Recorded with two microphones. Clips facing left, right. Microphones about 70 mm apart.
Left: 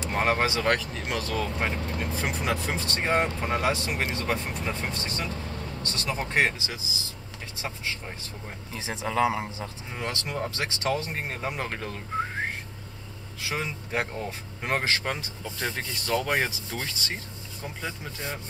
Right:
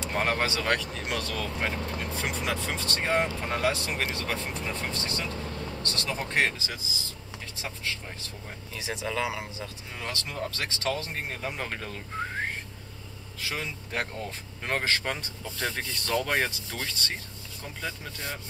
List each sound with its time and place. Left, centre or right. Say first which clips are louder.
0.1 s speech: left 3 dB; centre
8.7 s speech: left 4 dB; left
9.9 s speech: left 3 dB; centre
13.4 s speech: left 3 dB; centre